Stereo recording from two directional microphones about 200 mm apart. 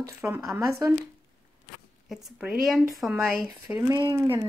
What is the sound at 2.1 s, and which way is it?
Speech, 5° right (ahead or behind).